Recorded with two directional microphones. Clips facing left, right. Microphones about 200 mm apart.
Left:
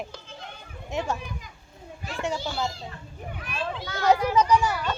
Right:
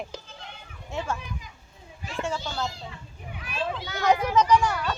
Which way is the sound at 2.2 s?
15° left (ahead or behind).